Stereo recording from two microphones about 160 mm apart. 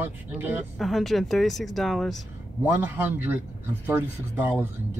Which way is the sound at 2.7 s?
10° right (ahead or behind).